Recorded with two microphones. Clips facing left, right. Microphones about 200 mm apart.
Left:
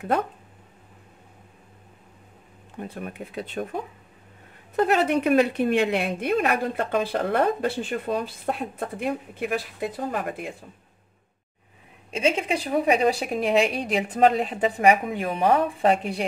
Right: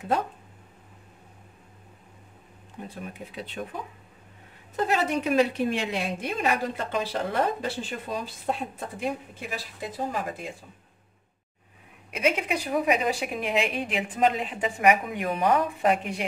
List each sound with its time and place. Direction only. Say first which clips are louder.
2.9 s speech: left 3 dB; 55° left (ahead or behind)
4.7 s a woman's voice: left 5 dB; 60° left (ahead or behind)
12.1 s a woman's voice: left 2 dB; 30° left (ahead or behind)